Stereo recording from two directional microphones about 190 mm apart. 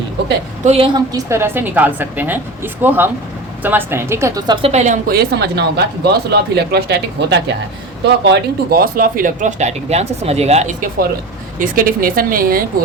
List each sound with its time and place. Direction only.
0.6 s a woman's voice: 35° right (ahead or behind)
0.9 s a woman's voice: 15° right (ahead or behind); by 10.8 s 35° right (ahead or behind)
11.6 s a woman's voice: 45° right (ahead or behind)